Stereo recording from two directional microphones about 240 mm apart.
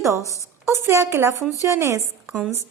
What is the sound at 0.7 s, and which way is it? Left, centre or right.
Speech, centre.